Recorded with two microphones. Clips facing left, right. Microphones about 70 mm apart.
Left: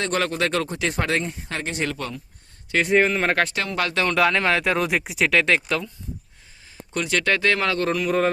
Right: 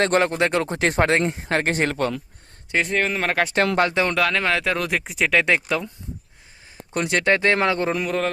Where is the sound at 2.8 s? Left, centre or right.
Centre.